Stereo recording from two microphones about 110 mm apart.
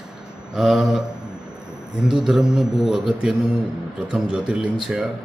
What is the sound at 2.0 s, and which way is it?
Speech, 5° right (ahead or behind).